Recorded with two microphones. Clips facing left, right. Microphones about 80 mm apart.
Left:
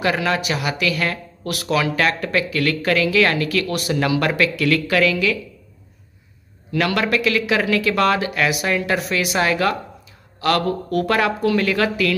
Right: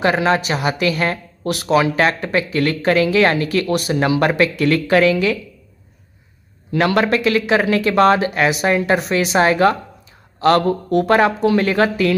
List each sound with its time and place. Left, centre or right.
0.0 s speech: right
6.7 s speech: right